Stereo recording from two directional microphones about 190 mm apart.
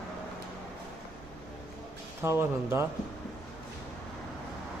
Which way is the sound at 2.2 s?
15° right (ahead or behind).